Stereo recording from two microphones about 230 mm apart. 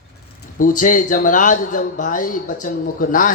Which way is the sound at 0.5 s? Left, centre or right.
Left.